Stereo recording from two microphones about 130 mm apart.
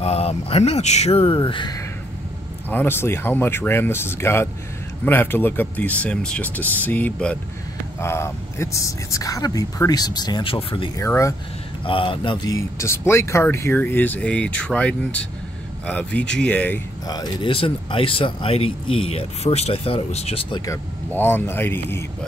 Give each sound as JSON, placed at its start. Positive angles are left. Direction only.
{"t": 0.0, "sound": "speech", "side_deg": 50}
{"t": 2.7, "sound": "speech", "side_deg": 15}
{"t": 11.0, "sound": "speech", "side_deg": 25}
{"t": 11.8, "sound": "a man's voice", "side_deg": 40}
{"t": 12.4, "sound": "speech", "side_deg": 25}
{"t": 17.1, "sound": "speech", "side_deg": 35}
{"t": 20.5, "sound": "speech", "side_deg": 25}